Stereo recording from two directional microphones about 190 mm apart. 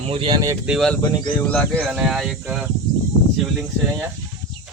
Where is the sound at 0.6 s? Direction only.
Centre (ahead or behind).